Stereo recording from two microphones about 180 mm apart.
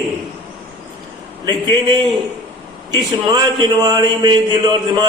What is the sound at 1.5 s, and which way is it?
A man's voice, 25° right (ahead or behind).